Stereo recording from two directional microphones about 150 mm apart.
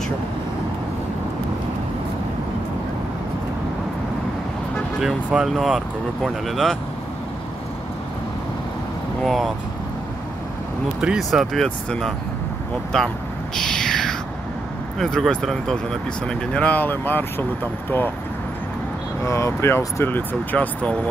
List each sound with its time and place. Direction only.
5.0 s speech: centre (ahead or behind)
9.2 s speech: centre (ahead or behind)
11.0 s speech: 5° right (ahead or behind)
13.6 s a sound: 5° left (ahead or behind)
15.0 s speech: 5° left (ahead or behind)
19.2 s speech: 20° left (ahead or behind)